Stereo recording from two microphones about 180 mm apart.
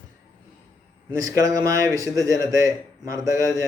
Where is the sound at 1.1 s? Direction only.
20° right (ahead or behind).